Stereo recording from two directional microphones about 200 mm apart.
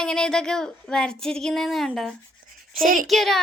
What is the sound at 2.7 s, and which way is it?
Speech, 45° right (ahead or behind).